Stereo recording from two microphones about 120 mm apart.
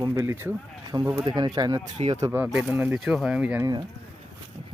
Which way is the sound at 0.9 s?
30° right (ahead or behind).